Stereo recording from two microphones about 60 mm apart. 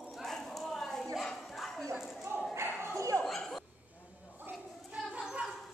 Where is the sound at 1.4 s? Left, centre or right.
Centre.